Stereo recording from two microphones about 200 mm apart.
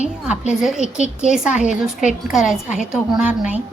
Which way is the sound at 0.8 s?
35° left (ahead or behind).